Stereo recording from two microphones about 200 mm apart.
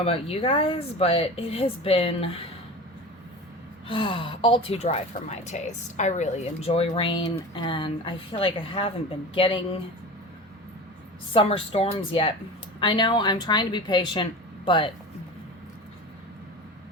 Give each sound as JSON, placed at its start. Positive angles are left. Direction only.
{"t": 0.0, "sound": "speech", "side_deg": 30}
{"t": 3.8, "sound": "speech", "side_deg": 25}
{"t": 11.3, "sound": "speech", "side_deg": 30}